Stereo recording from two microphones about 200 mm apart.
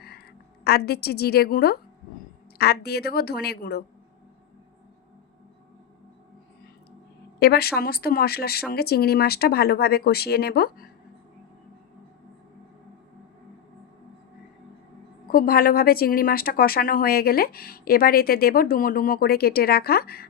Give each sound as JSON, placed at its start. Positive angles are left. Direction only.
{"t": 0.0, "sound": "a woman's voice", "side_deg": 55}
{"t": 7.3, "sound": "speech", "side_deg": 50}
{"t": 15.3, "sound": "speech", "side_deg": 50}